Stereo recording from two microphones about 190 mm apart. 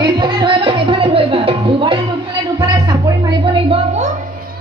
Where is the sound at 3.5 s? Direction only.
30° right (ahead or behind).